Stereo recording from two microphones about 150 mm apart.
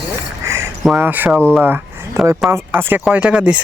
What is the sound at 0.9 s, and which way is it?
Speech, 10° right (ahead or behind).